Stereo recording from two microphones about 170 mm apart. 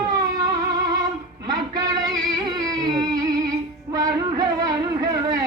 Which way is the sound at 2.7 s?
20° right (ahead or behind).